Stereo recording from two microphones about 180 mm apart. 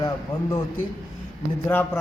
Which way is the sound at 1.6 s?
10° left (ahead or behind).